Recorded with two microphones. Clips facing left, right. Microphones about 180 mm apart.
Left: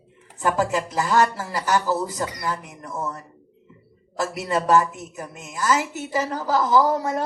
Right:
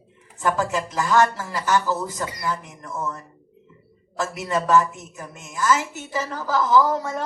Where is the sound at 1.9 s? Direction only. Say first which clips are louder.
Left 2 dB; 35° left (ahead or behind).